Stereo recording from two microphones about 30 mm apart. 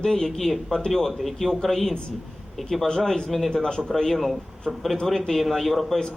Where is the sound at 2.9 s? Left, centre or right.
Centre.